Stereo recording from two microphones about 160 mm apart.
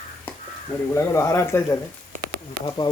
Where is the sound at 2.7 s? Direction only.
25° left (ahead or behind).